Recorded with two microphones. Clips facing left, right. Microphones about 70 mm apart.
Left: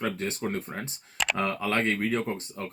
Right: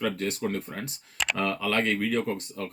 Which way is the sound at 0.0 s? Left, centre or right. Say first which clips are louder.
Right 2 dB; left.